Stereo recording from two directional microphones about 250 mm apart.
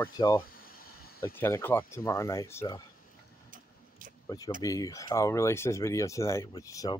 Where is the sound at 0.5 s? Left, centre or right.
Left.